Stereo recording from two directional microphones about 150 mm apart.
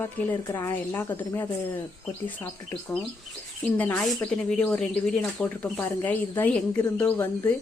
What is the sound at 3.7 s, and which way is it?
Speech, 10° left (ahead or behind).